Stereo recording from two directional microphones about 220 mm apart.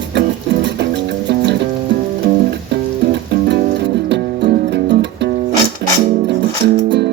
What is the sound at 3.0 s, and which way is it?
Music, 50° right (ahead or behind).